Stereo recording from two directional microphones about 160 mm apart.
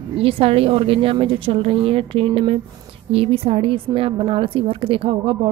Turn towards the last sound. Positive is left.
turn(degrees=-35)  # may be behind; listen again after turning